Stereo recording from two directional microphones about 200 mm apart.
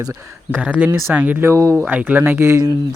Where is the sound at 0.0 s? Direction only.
10° right (ahead or behind).